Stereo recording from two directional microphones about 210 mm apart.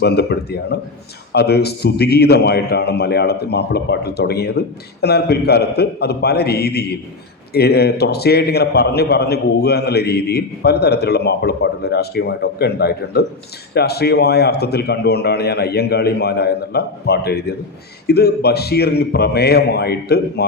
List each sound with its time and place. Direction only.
0.0 s a man's voice: 50° left (ahead or behind)